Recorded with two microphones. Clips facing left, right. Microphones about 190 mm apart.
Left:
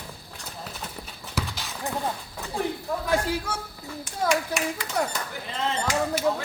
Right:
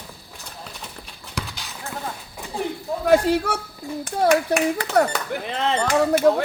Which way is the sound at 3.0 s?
65° right (ahead or behind).